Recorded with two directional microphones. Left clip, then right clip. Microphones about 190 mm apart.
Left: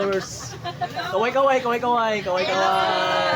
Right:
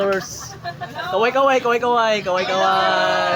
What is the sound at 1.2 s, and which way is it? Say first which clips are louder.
Speech: right 3 dB; 40° right (ahead or behind).